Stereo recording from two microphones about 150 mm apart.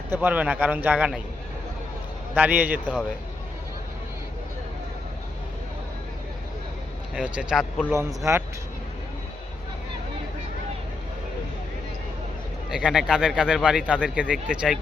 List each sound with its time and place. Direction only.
0.1 s speech: 10° right (ahead or behind)
2.3 s speech: 10° right (ahead or behind)
7.2 s a man's voice: 5° right (ahead or behind)
7.9 s a man's voice: 20° right (ahead or behind)
12.7 s a man's voice: 5° right (ahead or behind)